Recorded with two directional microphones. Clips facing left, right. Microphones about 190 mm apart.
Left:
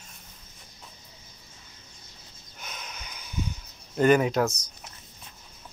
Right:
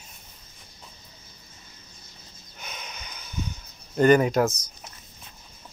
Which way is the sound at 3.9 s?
Centre (ahead or behind).